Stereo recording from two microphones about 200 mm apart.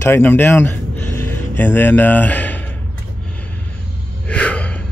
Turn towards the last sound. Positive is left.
turn(degrees=5)  # may be behind; listen again after turning